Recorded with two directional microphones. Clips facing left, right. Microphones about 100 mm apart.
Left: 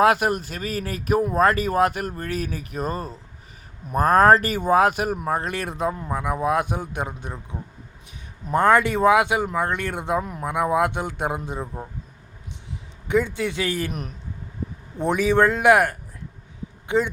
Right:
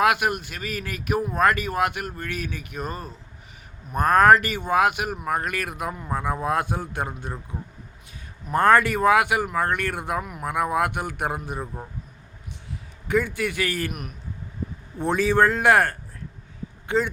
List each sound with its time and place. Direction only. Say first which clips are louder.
0.0 s speech: left 3 dB; 35° left (ahead or behind)
6.1 s a man's voice: left 1 dB; 15° left (ahead or behind)
8.5 s speech: even; 20° left (ahead or behind)
11.6 s speech: left 2 dB; 5° left (ahead or behind)
13.1 s speech: left 2 dB; 20° left (ahead or behind)
14.9 s a man's voice: left 1 dB; 15° left (ahead or behind)